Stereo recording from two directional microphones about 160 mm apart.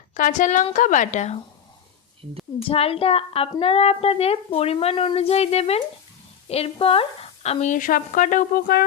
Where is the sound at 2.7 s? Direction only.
35° left (ahead or behind).